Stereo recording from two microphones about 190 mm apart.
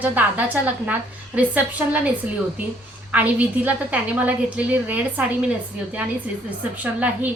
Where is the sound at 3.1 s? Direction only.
10° right (ahead or behind).